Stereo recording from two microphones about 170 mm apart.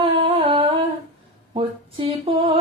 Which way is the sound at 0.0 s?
30° right (ahead or behind).